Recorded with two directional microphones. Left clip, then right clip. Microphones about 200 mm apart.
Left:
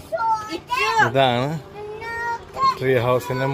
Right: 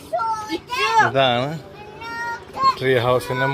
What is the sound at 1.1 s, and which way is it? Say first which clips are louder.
Speech: even; 25° left (ahead or behind).